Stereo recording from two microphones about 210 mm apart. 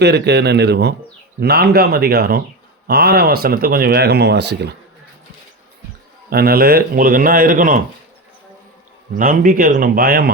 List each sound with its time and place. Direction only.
0.0 s speech: 50° right (ahead or behind)
6.3 s speech: 45° right (ahead or behind)
9.1 s speech: 40° right (ahead or behind)